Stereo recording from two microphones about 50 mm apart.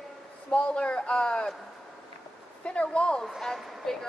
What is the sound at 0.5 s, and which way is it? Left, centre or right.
A man's voice, left.